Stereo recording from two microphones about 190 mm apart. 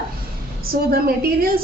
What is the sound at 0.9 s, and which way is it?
Speech, 50° right (ahead or behind).